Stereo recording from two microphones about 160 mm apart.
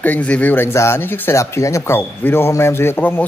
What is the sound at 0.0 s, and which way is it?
Speech, 10° left (ahead or behind).